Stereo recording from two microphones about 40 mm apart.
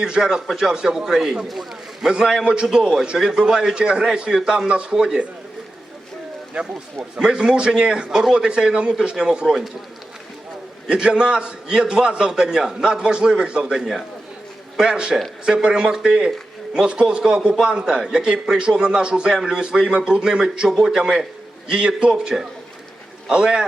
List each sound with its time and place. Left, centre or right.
0.0 s a man's voice: centre
2.0 s a man's voice: centre
2.4 s a man's voice: right
6.5 s a man's voice: right
10.8 s a man's voice: right
13.7 s a man's voice: centre
14.8 s a man's voice: right